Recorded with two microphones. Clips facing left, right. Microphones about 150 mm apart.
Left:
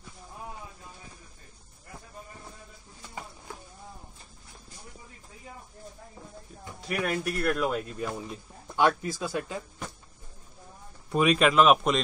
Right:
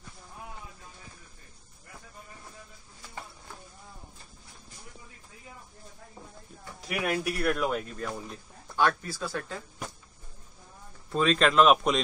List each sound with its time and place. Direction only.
6.9 s speech: 5° right (ahead or behind)
8.7 s speech: 15° left (ahead or behind)
11.1 s speech: 15° left (ahead or behind)